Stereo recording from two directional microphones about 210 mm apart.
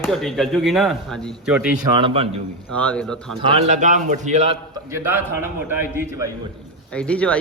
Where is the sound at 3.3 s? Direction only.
30° right (ahead or behind).